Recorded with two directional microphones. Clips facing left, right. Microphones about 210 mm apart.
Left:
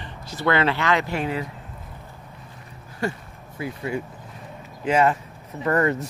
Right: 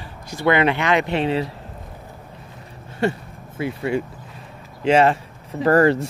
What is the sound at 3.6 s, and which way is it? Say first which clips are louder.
Speech: right 5 dB; 75° right (ahead or behind).